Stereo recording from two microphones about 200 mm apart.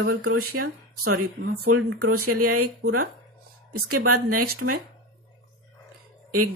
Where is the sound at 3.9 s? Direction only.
90° right.